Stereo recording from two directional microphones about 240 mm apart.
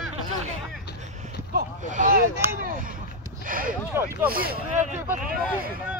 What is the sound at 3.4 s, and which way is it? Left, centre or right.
Speech, right.